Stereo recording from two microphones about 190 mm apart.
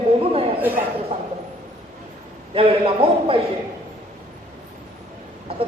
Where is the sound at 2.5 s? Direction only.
30° right (ahead or behind).